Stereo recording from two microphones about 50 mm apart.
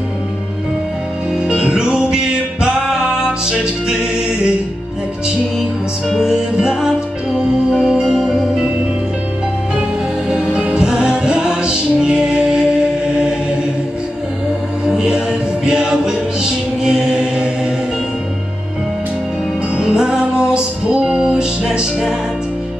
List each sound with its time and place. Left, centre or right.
1.5 s music: centre
5.6 s music: centre
10.3 s music: right
14.9 s music: centre
19.8 s music: centre